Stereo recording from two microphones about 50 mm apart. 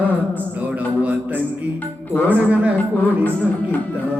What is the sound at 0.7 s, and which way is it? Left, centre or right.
Music, right.